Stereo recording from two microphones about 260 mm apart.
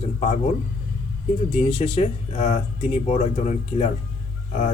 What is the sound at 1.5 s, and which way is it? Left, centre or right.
Speech, left.